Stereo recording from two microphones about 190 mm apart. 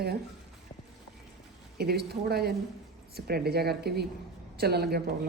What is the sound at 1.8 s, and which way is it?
Speech, 55° right (ahead or behind).